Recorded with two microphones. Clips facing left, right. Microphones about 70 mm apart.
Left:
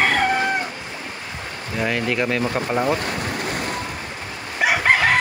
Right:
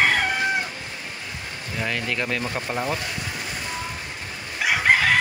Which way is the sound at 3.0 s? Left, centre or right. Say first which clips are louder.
Left 6 dB; left.